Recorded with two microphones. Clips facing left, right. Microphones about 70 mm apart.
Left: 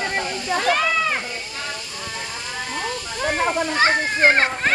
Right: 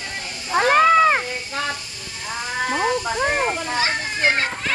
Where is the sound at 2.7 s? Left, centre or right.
Right.